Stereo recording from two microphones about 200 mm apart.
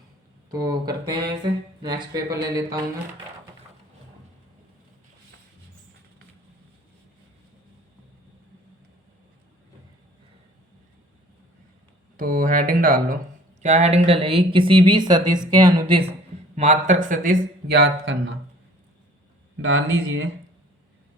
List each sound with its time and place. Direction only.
0.5 s speech: 20° right (ahead or behind)
12.1 s speech: 45° right (ahead or behind); by 16.0 s 25° right (ahead or behind)
16.6 s speech: 35° right (ahead or behind)
17.8 s speech: 65° right (ahead or behind)
19.5 s speech: 90° right